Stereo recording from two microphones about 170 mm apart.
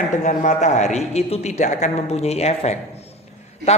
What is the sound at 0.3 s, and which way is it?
A woman's voice, 45° left (ahead or behind).